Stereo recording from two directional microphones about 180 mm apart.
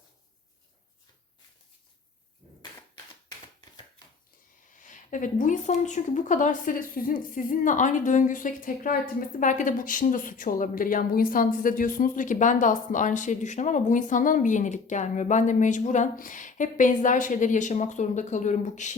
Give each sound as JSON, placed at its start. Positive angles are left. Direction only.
{"t": 4.8, "sound": "speech", "side_deg": 45}